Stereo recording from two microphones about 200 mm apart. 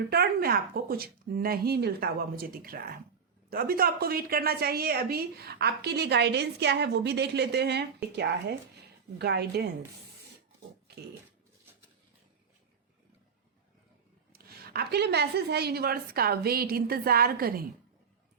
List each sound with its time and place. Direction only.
0.1 s a woman's voice: 50° right (ahead or behind)
14.3 s speech: 50° right (ahead or behind)